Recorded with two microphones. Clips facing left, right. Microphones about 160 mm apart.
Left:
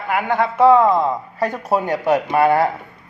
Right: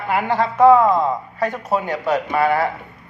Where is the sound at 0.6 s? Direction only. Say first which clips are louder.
Right 1 dB; 10° right (ahead or behind).